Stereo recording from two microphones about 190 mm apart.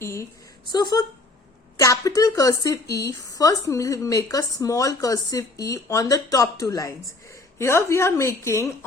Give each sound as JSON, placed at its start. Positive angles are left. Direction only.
{"t": 0.0, "sound": "a woman's voice", "side_deg": 15}